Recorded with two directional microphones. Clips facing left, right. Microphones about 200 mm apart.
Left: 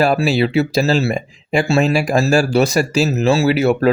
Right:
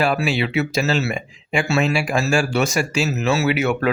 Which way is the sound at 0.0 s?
40° left (ahead or behind).